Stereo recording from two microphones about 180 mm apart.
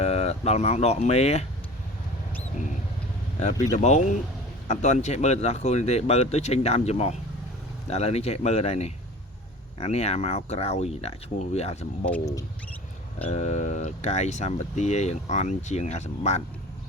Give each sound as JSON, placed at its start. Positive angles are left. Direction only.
{"t": 0.0, "sound": "speech", "side_deg": 35}
{"t": 3.4, "sound": "speech", "side_deg": 40}
{"t": 12.2, "sound": "speech", "side_deg": 20}
{"t": 13.2, "sound": "speech", "side_deg": 40}